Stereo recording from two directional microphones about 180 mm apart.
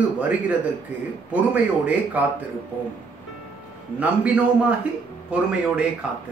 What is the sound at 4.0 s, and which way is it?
A man's voice, 5° right (ahead or behind).